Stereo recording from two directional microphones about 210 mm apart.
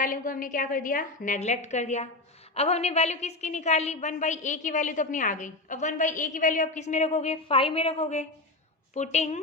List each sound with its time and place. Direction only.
0.0 s a woman's voice: 40° left (ahead or behind)